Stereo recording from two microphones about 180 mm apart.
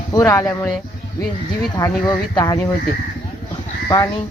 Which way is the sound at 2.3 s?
20° left (ahead or behind).